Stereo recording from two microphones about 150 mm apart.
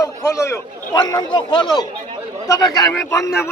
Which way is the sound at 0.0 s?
20° left (ahead or behind).